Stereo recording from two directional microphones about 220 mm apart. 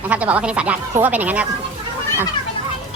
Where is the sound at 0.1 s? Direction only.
5° right (ahead or behind).